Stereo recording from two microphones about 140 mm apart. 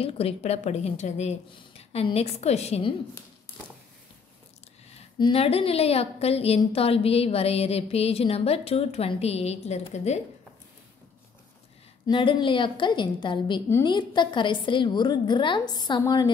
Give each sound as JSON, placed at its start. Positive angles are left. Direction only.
{"t": 0.0, "sound": "a woman's voice", "side_deg": 45}
{"t": 5.2, "sound": "a woman's voice", "side_deg": 45}
{"t": 12.1, "sound": "a woman's voice", "side_deg": 35}